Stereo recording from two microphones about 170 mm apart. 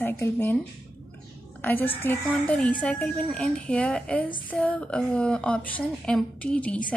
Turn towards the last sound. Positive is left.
turn(degrees=5)  # may be behind; listen again after turning